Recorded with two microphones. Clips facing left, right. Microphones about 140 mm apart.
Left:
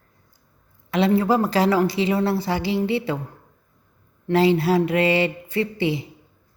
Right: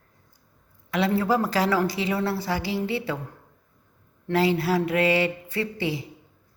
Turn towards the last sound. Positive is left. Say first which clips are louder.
# left 5 dB
turn(degrees=20)  # may be behind; listen again after turning